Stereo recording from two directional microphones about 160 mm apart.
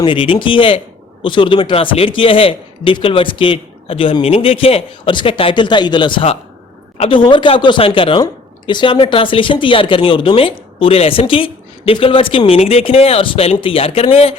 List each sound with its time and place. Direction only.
0.0 s speech: 30° left (ahead or behind)